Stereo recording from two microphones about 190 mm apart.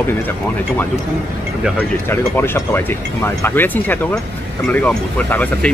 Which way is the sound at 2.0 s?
10° left (ahead or behind).